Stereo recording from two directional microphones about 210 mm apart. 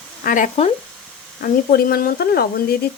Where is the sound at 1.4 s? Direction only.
45° left (ahead or behind).